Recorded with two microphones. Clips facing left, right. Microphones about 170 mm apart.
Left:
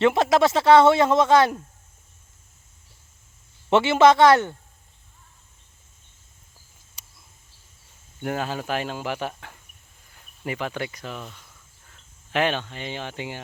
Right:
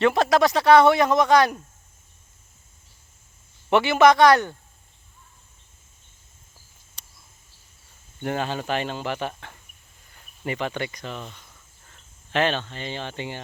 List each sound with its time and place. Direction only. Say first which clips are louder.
0.0 s speech: even; 20° left (ahead or behind)
3.7 s speech: left 1 dB; 25° left (ahead or behind)
8.2 s speech: right 1 dB; 5° left (ahead or behind)
10.1 s cricket: right 1 dB; 5° left (ahead or behind)